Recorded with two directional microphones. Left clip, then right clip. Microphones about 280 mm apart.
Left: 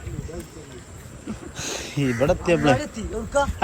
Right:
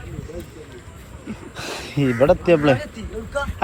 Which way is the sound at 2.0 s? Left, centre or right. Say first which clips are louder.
Right 5 dB; centre.